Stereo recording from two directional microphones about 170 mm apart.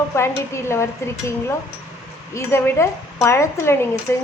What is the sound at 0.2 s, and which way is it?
Speech, 15° left (ahead or behind).